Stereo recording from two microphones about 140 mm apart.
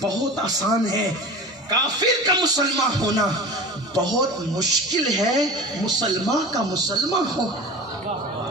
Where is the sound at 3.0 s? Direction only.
25° right (ahead or behind).